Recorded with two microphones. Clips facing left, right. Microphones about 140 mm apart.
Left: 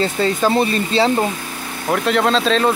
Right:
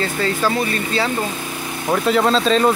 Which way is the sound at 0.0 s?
25° left (ahead or behind).